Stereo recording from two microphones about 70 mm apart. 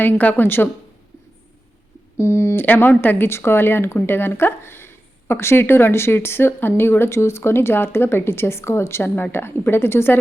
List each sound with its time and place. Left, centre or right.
0.0 s a woman's voice: left
2.1 s a woman's voice: left
2.6 s a woman's voice: left